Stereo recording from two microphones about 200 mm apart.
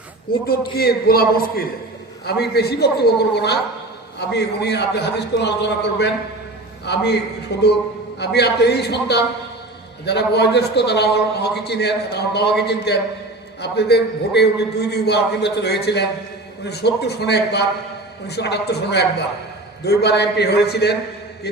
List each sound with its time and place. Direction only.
0.4 s a man's voice: 50° left (ahead or behind)